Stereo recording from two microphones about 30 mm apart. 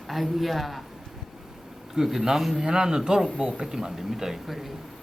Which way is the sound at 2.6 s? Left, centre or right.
Right.